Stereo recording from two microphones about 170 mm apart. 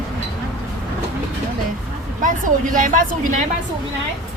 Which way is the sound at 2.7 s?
50° right (ahead or behind).